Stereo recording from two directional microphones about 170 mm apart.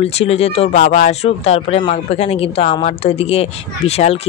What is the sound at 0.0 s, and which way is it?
A woman's voice, 35° left (ahead or behind).